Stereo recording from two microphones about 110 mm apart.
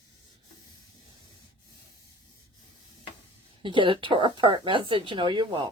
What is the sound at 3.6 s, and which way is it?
Speech, 50° right (ahead or behind).